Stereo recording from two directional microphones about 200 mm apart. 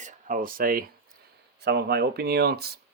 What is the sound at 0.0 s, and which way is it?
Speech, 40° right (ahead or behind).